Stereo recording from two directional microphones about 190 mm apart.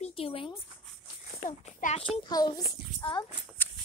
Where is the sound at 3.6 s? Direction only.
10° left (ahead or behind).